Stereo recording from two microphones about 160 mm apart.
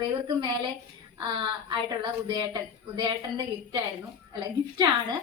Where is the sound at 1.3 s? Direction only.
30° right (ahead or behind).